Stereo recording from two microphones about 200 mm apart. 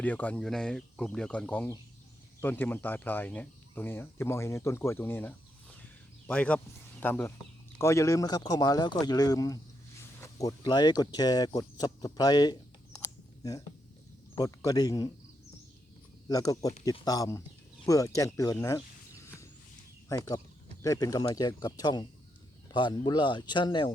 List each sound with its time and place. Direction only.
0.0 s speech: 10° left (ahead or behind)
13.0 s a sound: 15° left (ahead or behind)
14.3 s speech: 20° left (ahead or behind)
16.3 s speech: 15° left (ahead or behind)
20.1 s speech: 15° left (ahead or behind)